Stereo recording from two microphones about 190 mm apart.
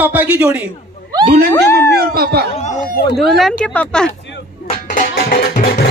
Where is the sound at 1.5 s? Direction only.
15° left (ahead or behind).